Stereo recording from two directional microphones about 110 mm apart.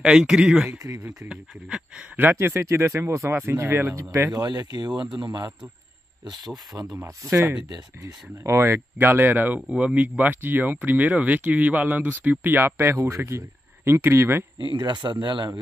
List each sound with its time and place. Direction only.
0.0 s speech: 5° right (ahead or behind)
0.7 s speech: 30° right (ahead or behind)
1.0 s speech: 15° right (ahead or behind)
3.9 s speech: 30° right (ahead or behind)
7.0 s speech: 25° right (ahead or behind)
14.6 s speech: 45° right (ahead or behind)